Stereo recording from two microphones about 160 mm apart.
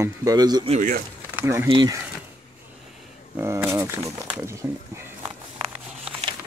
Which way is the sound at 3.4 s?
15° right (ahead or behind).